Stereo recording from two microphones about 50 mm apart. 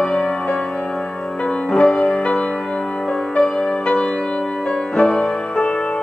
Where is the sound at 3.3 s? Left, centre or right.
Centre.